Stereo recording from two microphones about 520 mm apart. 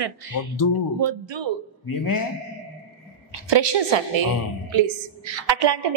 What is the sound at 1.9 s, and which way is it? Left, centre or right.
Speech, left.